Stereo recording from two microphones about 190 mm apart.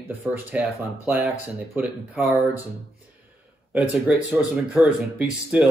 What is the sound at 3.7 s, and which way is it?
Speech, 5° right (ahead or behind).